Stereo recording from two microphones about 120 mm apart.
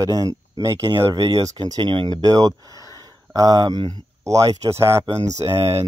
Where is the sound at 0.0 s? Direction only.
30° right (ahead or behind).